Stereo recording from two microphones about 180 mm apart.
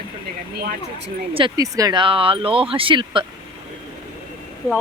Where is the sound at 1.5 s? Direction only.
20° right (ahead or behind).